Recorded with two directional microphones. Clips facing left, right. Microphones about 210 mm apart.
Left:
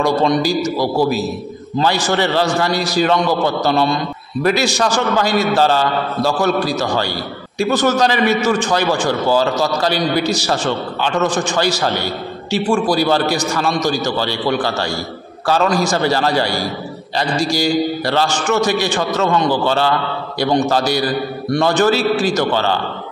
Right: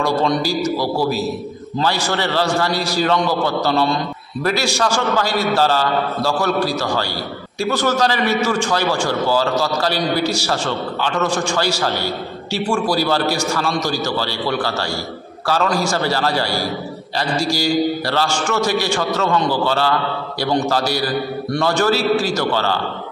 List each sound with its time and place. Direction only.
0.0 s a man's voice: 15° left (ahead or behind)